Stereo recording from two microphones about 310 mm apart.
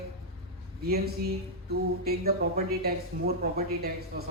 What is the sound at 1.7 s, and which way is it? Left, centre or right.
A woman's voice, right.